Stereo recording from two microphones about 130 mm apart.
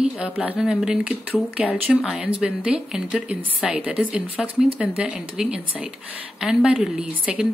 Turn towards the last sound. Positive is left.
turn(degrees=-5)  # may be behind; listen again after turning